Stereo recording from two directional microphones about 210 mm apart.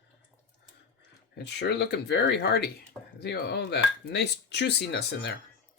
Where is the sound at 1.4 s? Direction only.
55° left (ahead or behind).